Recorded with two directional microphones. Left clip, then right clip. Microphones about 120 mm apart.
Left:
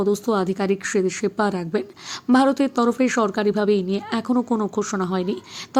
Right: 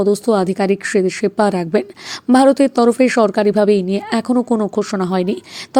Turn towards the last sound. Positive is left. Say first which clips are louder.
# right 6 dB
turn(degrees=-55)  # may be behind; listen again after turning